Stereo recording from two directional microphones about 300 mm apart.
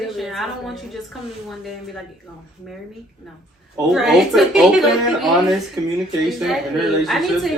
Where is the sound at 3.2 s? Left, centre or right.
Centre.